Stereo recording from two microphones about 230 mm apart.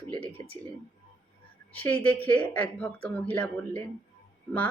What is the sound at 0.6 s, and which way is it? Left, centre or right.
Speech, centre.